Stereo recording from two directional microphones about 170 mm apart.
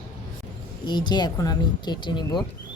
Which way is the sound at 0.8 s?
25° left (ahead or behind).